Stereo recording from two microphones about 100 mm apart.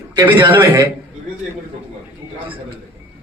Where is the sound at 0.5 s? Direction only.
25° right (ahead or behind).